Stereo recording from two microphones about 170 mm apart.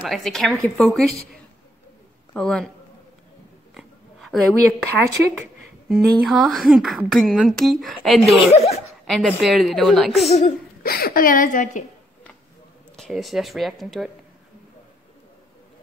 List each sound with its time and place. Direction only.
0.0 s speech: centre (ahead or behind)
2.3 s speech: 5° left (ahead or behind)
3.7 s oink: centre (ahead or behind)
5.9 s speech: centre (ahead or behind)
8.4 s speech: 40° left (ahead or behind)
9.4 s speech: centre (ahead or behind)
10.8 s a woman's voice: 60° left (ahead or behind)
12.9 s speech: centre (ahead or behind)